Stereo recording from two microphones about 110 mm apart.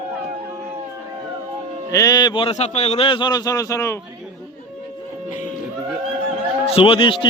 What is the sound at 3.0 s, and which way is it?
Speech, 45° left (ahead or behind).